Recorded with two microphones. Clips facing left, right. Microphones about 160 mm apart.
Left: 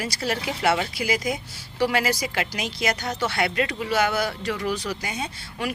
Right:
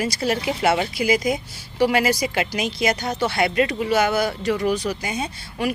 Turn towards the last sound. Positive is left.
turn(degrees=-15)  # may be behind; listen again after turning